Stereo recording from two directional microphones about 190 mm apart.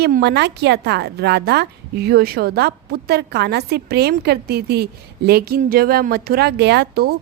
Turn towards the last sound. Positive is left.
turn(degrees=-55)  # may be behind; listen again after turning